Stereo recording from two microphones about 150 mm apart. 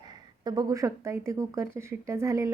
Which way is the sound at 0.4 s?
25° right (ahead or behind).